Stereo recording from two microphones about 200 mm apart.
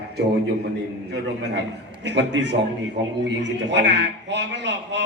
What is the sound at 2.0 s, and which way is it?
A man's voice, 60° right (ahead or behind).